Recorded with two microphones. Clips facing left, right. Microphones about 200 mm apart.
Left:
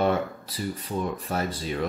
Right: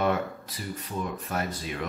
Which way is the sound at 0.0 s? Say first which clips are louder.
Left 2 dB; 30° left (ahead or behind).